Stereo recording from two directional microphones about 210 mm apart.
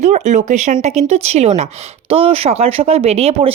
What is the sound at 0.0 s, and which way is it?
Speech, 35° right (ahead or behind).